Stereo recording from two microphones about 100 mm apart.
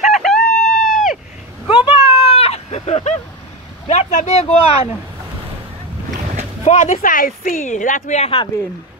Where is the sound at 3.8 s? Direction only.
90° left.